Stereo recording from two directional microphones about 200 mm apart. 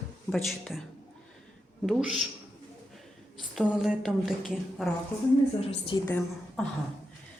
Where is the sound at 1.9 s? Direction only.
Centre (ahead or behind).